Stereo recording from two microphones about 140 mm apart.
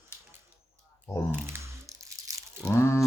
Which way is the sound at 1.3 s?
15° right (ahead or behind).